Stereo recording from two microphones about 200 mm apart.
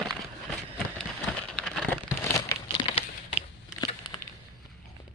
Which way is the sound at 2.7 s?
30° left (ahead or behind).